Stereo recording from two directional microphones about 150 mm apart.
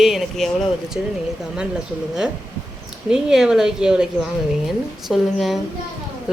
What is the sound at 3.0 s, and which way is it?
A woman's voice, 5° right (ahead or behind).